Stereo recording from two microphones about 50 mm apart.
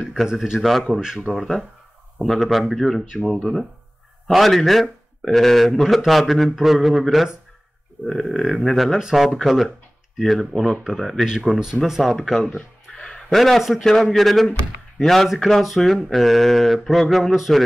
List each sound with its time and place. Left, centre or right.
0.0 s speech: centre
12.5 s a sound: left
13.3 s a man's voice: centre